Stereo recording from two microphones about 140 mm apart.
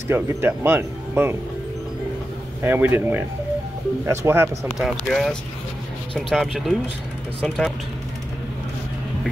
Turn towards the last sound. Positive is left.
turn(degrees=5)  # may be behind; listen again after turning